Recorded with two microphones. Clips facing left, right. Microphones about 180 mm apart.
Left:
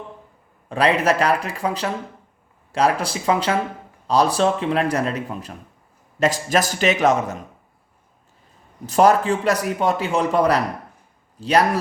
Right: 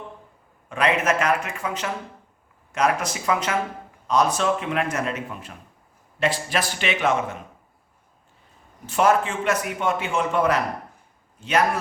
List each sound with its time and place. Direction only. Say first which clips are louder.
0.7 s a man's voice: left 3 dB; 35° left (ahead or behind)
8.9 s a man's voice: left 4 dB; 35° left (ahead or behind)